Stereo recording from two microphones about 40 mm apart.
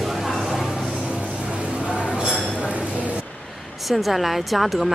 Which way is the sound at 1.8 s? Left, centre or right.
Right.